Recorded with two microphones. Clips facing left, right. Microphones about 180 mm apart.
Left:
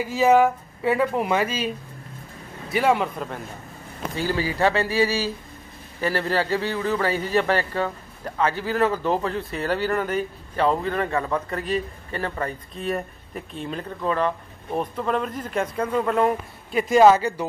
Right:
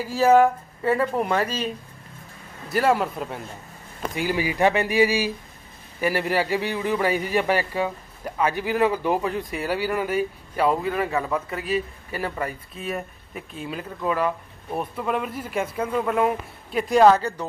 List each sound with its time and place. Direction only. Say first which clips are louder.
0.1 s speech: right 1 dB; centre (ahead or behind)
2.7 s speech: even; centre (ahead or behind)
4.1 s a man's voice: even; 15° right (ahead or behind); by 17.5 s 5° left (ahead or behind)